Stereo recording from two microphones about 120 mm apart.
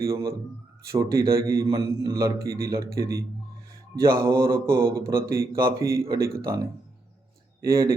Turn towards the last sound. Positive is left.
turn(degrees=-25)  # may be behind; listen again after turning